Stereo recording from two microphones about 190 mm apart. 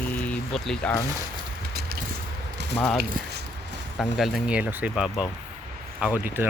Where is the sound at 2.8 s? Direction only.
5° left (ahead or behind).